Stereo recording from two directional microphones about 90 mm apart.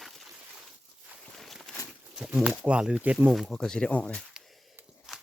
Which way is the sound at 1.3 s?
5° left (ahead or behind).